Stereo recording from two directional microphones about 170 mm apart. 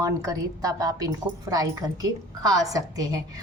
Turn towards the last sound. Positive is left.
turn(degrees=-20)  # may be behind; listen again after turning